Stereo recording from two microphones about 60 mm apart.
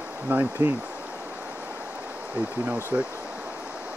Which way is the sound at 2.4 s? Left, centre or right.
Right.